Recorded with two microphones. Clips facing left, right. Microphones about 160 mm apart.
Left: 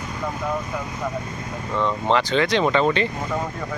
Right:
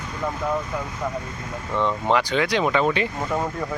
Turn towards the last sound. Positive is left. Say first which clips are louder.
# left 2 dB
turn(degrees=-10)  # may be behind; listen again after turning